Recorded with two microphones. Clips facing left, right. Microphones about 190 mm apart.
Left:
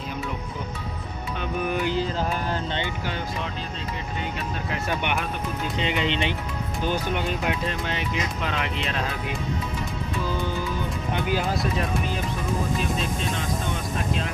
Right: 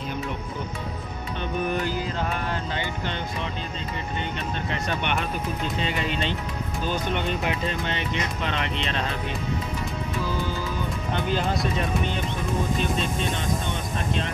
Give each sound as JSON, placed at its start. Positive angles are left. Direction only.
{"t": 4.6, "sound": "speech", "side_deg": 5}
{"t": 5.8, "sound": "speech", "side_deg": 20}
{"t": 11.2, "sound": "speech", "side_deg": 5}